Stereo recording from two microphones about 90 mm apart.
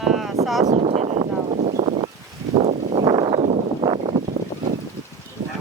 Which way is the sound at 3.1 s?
50° right (ahead or behind).